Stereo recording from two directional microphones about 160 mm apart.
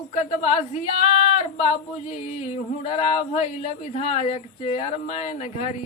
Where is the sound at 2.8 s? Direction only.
40° left (ahead or behind).